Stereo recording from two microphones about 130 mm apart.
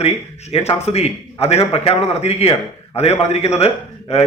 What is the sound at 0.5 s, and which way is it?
A man's voice, 55° left (ahead or behind).